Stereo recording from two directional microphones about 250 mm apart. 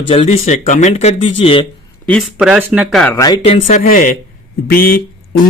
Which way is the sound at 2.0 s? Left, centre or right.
Centre.